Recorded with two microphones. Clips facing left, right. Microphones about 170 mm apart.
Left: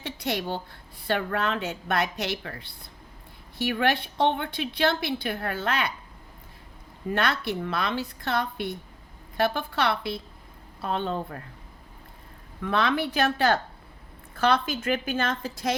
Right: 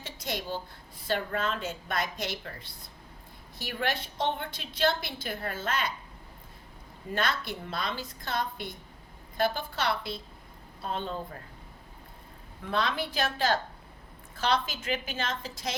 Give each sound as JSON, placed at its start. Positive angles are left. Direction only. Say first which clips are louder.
{"t": 0.0, "sound": "a sound", "louder": "left 6 dB", "side_deg": 65}
{"t": 1.0, "sound": "a woman's voice", "louder": "left 3 dB", "side_deg": 65}
{"t": 7.1, "sound": "a woman's voice", "louder": "left 5 dB", "side_deg": 65}
{"t": 12.6, "sound": "a woman's voice", "louder": "left 5 dB", "side_deg": 60}